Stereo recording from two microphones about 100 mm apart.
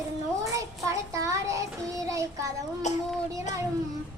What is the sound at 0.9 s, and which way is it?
Child singing, 30° right (ahead or behind).